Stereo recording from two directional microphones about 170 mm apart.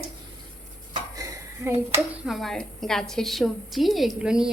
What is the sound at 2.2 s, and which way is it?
A woman's voice, centre (ahead or behind).